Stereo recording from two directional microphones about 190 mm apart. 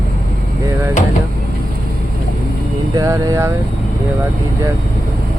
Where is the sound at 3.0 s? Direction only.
15° right (ahead or behind).